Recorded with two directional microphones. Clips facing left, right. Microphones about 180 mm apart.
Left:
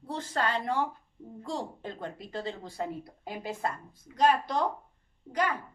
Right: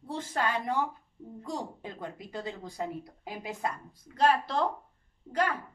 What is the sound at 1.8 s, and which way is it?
A woman's voice, 5° right (ahead or behind).